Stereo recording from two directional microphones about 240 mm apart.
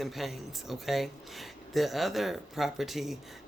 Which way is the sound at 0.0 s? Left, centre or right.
Centre.